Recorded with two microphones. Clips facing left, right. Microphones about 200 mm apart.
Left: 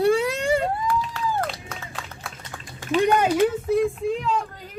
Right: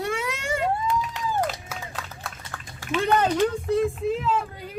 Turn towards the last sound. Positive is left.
turn(degrees=-5)  # may be behind; listen again after turning